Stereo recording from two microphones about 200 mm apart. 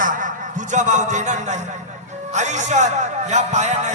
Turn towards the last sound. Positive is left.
turn(degrees=-35)  # may be behind; listen again after turning